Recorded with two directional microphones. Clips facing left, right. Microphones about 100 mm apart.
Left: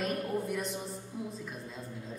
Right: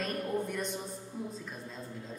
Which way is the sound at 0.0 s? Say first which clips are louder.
Left 1 dB; 5° left (ahead or behind).